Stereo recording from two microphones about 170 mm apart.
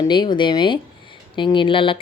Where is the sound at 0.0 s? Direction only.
25° left (ahead or behind).